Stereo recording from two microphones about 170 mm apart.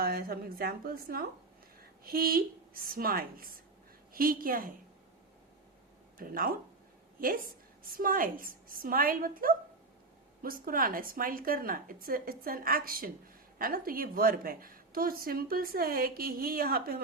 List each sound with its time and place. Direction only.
0.0 s a woman's voice: 60° right (ahead or behind)
6.1 s a woman's voice: 60° right (ahead or behind)